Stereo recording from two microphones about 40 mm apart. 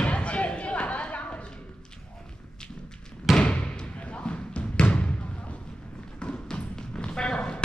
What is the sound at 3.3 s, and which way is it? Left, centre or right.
Basketball bounce, left.